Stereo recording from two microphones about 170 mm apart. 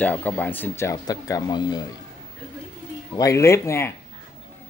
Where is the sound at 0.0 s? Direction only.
10° left (ahead or behind).